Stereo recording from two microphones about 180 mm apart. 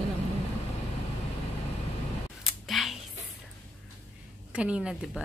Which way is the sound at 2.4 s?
Centre (ahead or behind).